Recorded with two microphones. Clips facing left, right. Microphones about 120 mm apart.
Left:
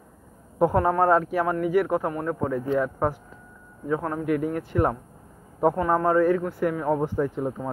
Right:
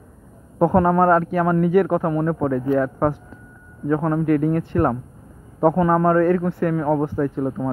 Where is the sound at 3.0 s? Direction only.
10° left (ahead or behind).